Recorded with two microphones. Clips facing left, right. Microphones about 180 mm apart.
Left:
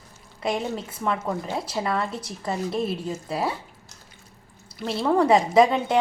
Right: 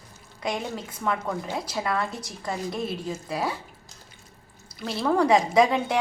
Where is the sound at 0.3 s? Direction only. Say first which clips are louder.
Left 3 dB; 30° left (ahead or behind).